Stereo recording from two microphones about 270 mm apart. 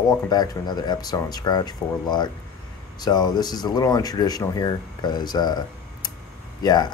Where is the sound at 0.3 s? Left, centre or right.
Centre.